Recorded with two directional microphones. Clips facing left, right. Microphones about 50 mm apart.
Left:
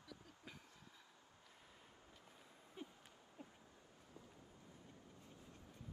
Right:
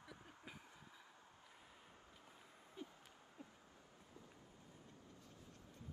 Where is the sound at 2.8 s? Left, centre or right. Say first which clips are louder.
Even; left.